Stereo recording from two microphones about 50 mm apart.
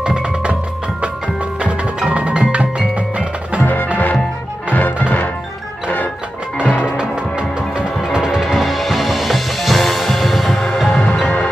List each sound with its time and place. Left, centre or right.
0.0 s music: right
1.6 s music: right
4.7 s music: left
6.6 s music: left
7.0 s music: centre
8.5 s music: centre